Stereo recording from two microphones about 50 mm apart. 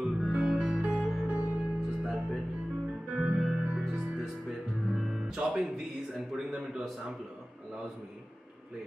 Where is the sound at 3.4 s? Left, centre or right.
Centre.